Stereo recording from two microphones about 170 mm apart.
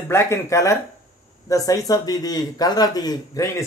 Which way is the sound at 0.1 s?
15° left (ahead or behind).